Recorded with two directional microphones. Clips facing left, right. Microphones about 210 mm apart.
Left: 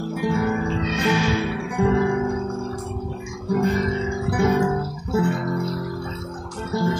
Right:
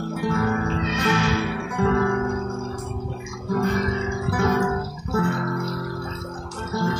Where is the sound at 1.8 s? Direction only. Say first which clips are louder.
Left 1 dB; 15° left (ahead or behind).